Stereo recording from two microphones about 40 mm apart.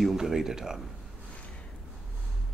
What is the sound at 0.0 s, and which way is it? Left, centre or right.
Speech, centre.